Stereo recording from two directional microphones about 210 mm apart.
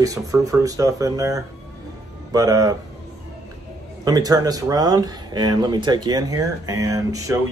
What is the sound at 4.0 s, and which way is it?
Speech, 20° right (ahead or behind).